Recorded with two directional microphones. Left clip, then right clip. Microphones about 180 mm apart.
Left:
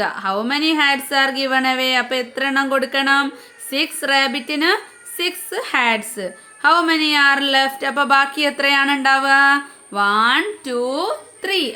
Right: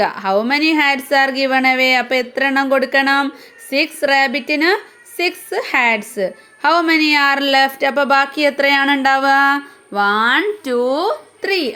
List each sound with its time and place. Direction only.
0.0 s a woman's voice: 20° right (ahead or behind)
10.6 s a woman's voice: 25° right (ahead or behind)